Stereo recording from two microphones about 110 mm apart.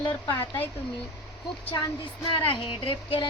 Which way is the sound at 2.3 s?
50° left (ahead or behind).